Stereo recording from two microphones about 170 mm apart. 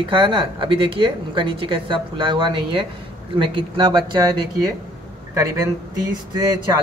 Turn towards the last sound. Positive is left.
turn(degrees=-25)  # may be behind; listen again after turning